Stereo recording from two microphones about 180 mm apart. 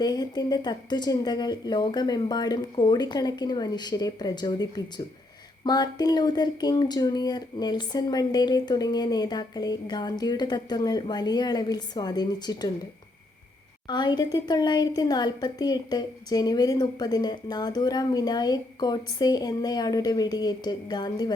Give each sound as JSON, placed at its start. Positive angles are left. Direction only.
{"t": 0.0, "sound": "a woman's voice", "side_deg": 20}
{"t": 13.8, "sound": "a woman's voice", "side_deg": 25}